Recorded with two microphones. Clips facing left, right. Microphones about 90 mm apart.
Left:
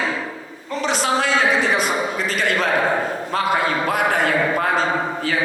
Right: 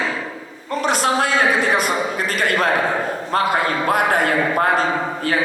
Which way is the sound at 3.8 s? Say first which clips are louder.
Right 2 dB; 50° right (ahead or behind).